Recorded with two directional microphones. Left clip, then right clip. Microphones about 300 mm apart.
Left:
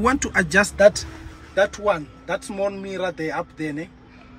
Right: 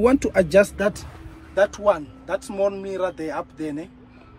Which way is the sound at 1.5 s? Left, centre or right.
Centre.